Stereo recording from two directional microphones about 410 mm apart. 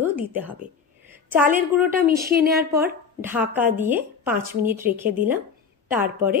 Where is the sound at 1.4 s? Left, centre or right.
Centre.